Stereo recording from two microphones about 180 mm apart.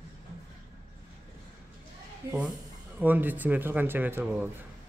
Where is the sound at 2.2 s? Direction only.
20° right (ahead or behind).